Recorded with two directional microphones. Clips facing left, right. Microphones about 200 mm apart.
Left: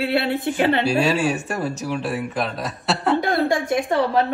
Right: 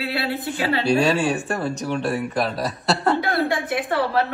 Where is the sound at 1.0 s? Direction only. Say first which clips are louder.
Even; 10° left (ahead or behind).